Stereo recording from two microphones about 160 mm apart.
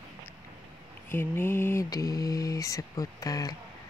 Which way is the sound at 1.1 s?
15° left (ahead or behind).